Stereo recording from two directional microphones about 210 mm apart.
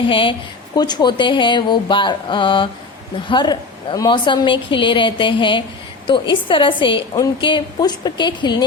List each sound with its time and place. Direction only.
0.1 s a woman's voice: 25° left (ahead or behind)